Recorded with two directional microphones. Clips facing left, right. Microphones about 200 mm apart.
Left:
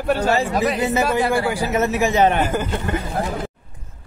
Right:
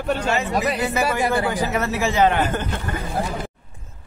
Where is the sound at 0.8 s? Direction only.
25° left (ahead or behind).